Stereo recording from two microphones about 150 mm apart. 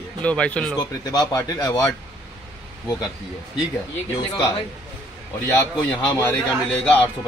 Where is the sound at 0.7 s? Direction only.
25° left (ahead or behind).